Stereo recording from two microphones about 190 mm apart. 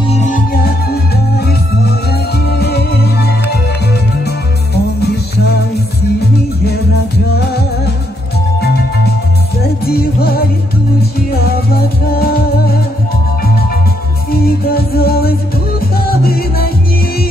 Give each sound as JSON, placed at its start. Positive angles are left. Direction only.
{"t": 0.1, "sound": "music", "side_deg": 40}
{"t": 5.0, "sound": "music", "side_deg": 60}
{"t": 7.3, "sound": "music", "side_deg": 55}
{"t": 9.8, "sound": "music", "side_deg": 55}
{"t": 14.4, "sound": "music", "side_deg": 55}